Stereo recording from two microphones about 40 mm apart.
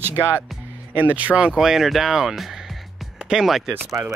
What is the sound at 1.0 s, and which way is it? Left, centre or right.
Speech, right.